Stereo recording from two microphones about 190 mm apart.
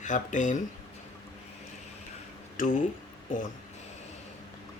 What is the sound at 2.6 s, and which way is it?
Speech, 45° left (ahead or behind).